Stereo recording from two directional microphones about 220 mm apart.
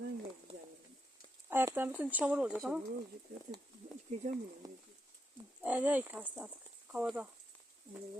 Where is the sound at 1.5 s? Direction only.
10° right (ahead or behind).